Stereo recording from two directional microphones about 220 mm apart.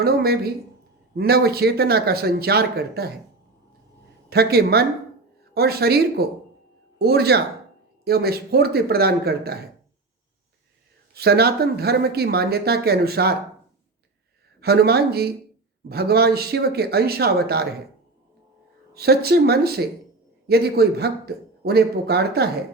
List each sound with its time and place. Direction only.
0.0 s speech: 45° right (ahead or behind)
4.3 s speech: 45° right (ahead or behind)
11.1 s speech: 45° right (ahead or behind)
14.6 s speech: 45° right (ahead or behind)
18.9 s speech: 45° right (ahead or behind)